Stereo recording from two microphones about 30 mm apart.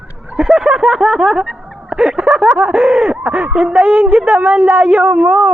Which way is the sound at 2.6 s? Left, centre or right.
Right.